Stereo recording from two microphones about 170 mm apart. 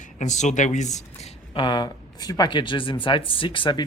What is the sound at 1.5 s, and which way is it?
Speech, 30° left (ahead or behind).